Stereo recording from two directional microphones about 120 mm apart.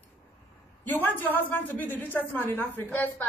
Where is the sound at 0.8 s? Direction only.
15° left (ahead or behind).